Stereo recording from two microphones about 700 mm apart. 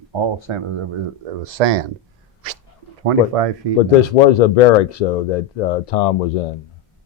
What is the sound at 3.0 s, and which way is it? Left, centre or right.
Speech, right.